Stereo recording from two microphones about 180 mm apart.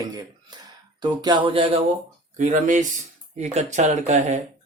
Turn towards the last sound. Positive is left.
turn(degrees=-40)  # may be behind; listen again after turning